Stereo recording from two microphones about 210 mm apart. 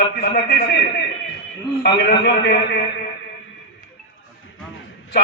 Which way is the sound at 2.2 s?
55° left (ahead or behind).